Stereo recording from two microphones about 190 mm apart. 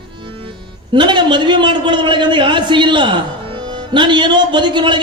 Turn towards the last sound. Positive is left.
turn(degrees=-25)  # may be behind; listen again after turning